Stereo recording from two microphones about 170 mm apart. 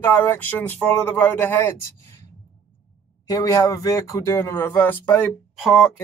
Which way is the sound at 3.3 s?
20° left (ahead or behind).